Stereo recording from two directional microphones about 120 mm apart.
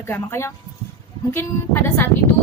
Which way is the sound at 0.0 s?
20° left (ahead or behind).